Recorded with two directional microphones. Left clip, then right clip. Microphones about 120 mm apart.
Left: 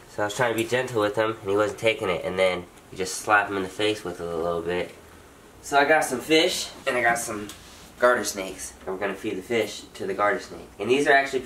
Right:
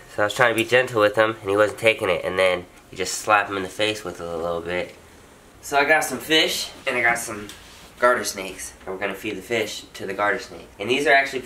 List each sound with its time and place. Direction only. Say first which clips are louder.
0.2 s speech: right 5 dB; 30° right (ahead or behind); by 6.5 s 10° right (ahead or behind)
6.8 s speech: right 2 dB; centre (ahead or behind)
9.0 s speech: right 2 dB; 10° right (ahead or behind)